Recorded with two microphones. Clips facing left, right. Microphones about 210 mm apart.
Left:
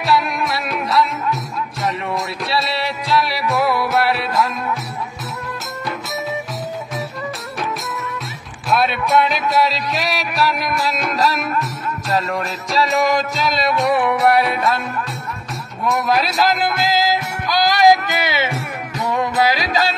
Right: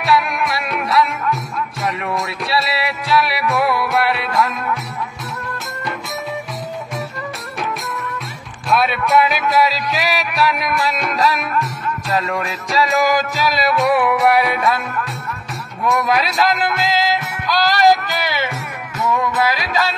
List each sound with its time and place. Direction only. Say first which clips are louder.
0.5 s music: even; centre (ahead or behind)
8.6 s music: right 1 dB; centre (ahead or behind)
15.8 s music: right 1 dB; centre (ahead or behind); by 18.6 s 20° left (ahead or behind)
18.9 s music: even; 35° left (ahead or behind)